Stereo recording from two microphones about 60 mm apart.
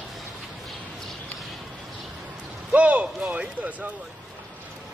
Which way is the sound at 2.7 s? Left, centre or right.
Right.